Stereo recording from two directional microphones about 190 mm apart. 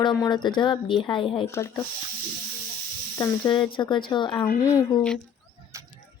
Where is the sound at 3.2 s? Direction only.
25° left (ahead or behind).